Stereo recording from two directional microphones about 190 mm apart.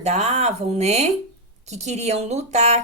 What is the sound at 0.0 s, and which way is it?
A woman's voice, 35° right (ahead or behind).